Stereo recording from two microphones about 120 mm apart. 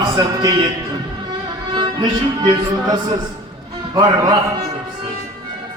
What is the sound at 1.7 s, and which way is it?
Music, 40° right (ahead or behind).